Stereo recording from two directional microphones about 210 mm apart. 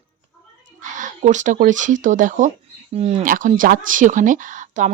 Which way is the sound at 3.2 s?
40° right (ahead or behind).